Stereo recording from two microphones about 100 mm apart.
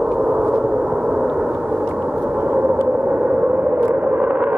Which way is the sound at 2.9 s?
15° right (ahead or behind).